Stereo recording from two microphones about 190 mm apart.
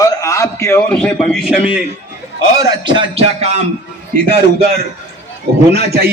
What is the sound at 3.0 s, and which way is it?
Music, 30° right (ahead or behind).